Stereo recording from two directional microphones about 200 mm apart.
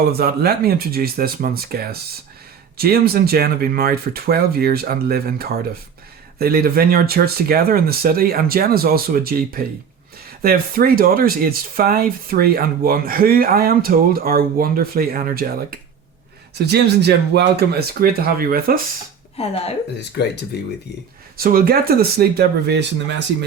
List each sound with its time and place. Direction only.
0.1 s speech: 50° right (ahead or behind)
19.4 s speech: 30° left (ahead or behind)
20.0 s speech: 55° left (ahead or behind)
21.3 s speech: 50° right (ahead or behind)